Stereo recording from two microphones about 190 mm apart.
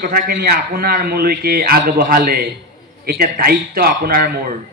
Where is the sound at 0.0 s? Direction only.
50° right (ahead or behind).